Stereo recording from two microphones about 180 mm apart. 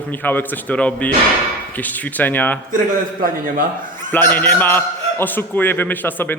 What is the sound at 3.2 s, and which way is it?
Speech, 50° right (ahead or behind).